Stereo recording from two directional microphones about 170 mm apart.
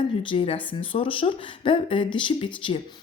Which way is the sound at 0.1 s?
30° left (ahead or behind).